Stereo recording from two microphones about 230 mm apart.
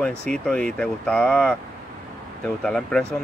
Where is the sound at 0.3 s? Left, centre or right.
Centre.